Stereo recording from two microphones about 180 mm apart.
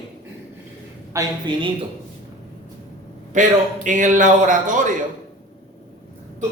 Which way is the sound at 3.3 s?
45° right (ahead or behind).